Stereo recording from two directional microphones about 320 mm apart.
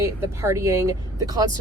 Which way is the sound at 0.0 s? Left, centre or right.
Centre.